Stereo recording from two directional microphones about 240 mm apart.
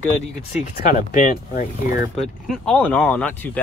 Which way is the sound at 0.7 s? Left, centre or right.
Left.